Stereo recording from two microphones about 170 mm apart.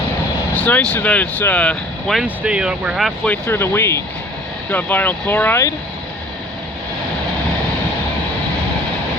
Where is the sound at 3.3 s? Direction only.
15° left (ahead or behind).